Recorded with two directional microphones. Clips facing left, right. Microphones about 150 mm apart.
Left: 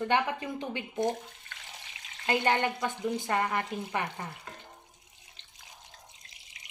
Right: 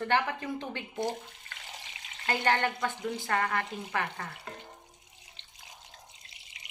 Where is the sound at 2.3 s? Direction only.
20° left (ahead or behind).